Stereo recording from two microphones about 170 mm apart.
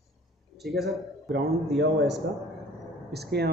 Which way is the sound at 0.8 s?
85° right.